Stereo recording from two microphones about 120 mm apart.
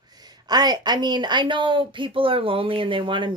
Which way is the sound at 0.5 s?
35° right (ahead or behind).